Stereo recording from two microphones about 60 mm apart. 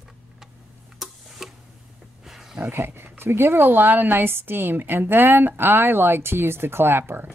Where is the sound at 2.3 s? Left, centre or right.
Centre.